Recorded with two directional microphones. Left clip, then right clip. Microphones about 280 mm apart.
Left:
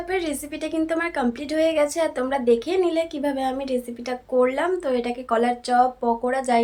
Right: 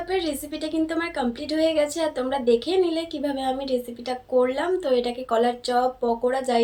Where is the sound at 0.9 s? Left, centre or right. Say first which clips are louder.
Left 2 dB; centre.